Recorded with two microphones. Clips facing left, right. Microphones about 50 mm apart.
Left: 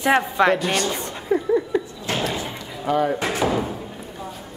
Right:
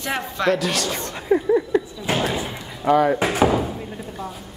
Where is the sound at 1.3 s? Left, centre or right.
Centre.